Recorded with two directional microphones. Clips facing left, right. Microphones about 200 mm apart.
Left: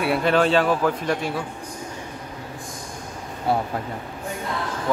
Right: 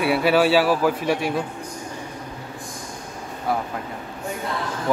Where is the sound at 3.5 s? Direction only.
30° left (ahead or behind).